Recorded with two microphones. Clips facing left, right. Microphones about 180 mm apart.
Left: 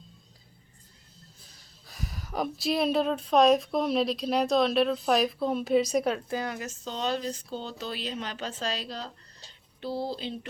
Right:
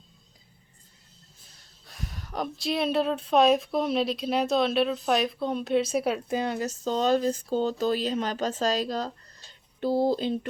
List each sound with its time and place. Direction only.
1.9 s speech: centre (ahead or behind)
6.2 s speech: 25° right (ahead or behind); by 10.3 s 50° right (ahead or behind)